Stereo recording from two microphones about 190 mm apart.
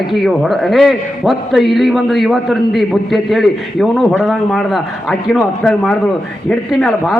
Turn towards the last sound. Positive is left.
turn(degrees=0)  # may be behind; listen again after turning